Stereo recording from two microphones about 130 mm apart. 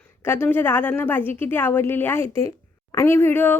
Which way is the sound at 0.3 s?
15° left (ahead or behind).